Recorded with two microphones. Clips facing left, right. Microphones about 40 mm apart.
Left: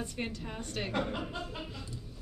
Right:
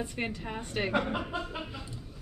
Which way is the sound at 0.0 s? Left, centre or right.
Centre.